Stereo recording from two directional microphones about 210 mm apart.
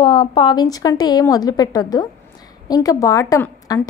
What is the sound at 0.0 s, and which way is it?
A woman's voice, 25° left (ahead or behind).